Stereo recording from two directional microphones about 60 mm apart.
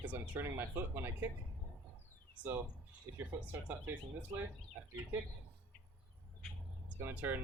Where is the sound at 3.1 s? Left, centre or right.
Right.